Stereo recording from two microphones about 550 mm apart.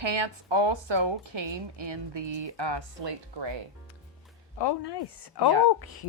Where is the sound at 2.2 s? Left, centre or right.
Right.